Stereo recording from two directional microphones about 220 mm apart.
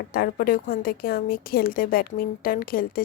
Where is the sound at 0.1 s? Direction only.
40° left (ahead or behind).